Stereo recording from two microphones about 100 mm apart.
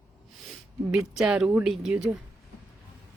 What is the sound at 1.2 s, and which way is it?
Speech, 10° right (ahead or behind).